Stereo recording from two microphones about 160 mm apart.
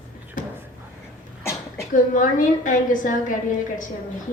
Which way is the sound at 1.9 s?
55° left (ahead or behind).